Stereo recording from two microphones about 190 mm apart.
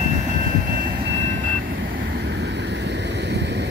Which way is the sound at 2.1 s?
60° right (ahead or behind).